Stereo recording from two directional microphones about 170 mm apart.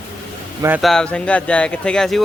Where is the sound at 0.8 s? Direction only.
5° left (ahead or behind).